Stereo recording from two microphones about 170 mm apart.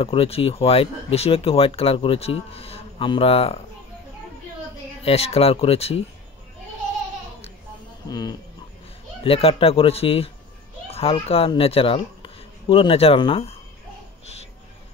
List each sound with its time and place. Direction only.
0.0 s speech: 35° left (ahead or behind)
5.0 s speech: 35° left (ahead or behind)
8.1 s livestock: 20° left (ahead or behind)
9.2 s speech: 35° left (ahead or behind)